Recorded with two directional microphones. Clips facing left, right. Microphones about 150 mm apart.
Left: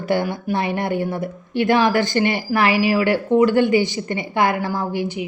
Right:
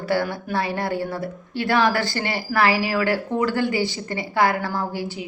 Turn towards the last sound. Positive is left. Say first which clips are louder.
# left 4 dB
turn(degrees=20)  # may be behind; listen again after turning